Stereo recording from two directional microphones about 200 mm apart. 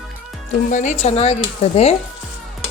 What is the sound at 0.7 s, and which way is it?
Speech, 35° left (ahead or behind).